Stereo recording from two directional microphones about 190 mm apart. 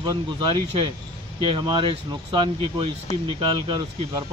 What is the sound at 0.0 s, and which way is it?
Speech, 25° right (ahead or behind).